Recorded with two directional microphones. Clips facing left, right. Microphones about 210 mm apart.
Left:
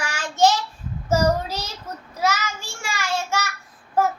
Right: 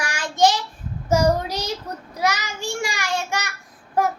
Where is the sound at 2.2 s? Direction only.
15° right (ahead or behind).